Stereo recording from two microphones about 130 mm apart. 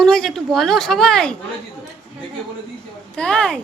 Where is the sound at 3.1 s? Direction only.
5° left (ahead or behind).